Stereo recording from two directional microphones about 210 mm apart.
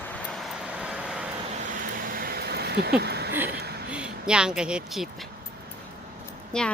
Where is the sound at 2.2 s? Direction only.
45° right (ahead or behind).